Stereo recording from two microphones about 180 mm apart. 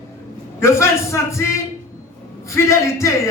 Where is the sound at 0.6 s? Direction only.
15° left (ahead or behind).